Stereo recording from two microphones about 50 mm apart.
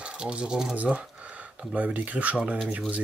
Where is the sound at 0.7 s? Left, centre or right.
Right.